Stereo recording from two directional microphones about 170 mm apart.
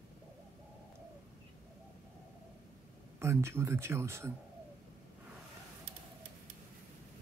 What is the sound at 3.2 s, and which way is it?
Speech, 15° right (ahead or behind).